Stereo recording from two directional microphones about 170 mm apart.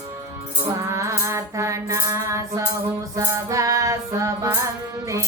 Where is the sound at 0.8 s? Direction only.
20° right (ahead or behind).